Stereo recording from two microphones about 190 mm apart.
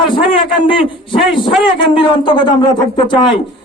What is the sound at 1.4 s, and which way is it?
A man's voice, 25° left (ahead or behind).